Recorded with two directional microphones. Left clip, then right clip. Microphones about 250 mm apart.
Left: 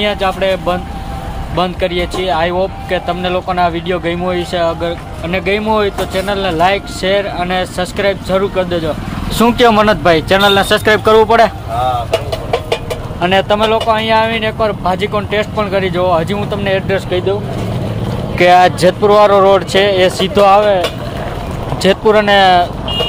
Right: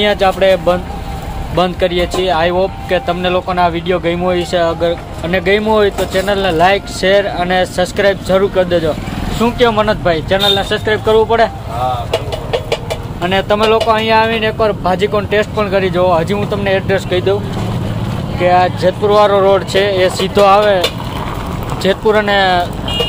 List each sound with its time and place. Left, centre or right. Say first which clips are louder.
0.0 s speech: right 3 dB; centre
9.4 s speech: left 3 dB; left
13.2 s speech: left 1 dB; centre
18.4 s speech: left 3 dB; left
19.0 s speech: left 2 dB; centre
21.8 s speech: left 2 dB; centre